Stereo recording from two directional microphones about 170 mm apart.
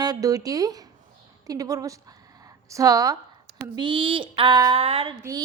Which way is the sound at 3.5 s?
85° right.